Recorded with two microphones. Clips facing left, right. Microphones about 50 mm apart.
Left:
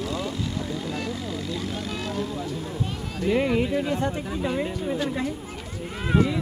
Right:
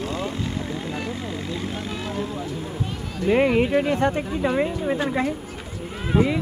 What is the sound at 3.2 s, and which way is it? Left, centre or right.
Speech, right.